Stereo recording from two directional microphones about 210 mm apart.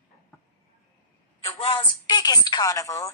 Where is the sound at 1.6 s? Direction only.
25° left (ahead or behind).